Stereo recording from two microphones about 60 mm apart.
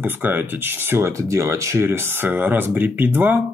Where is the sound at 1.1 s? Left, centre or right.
Right.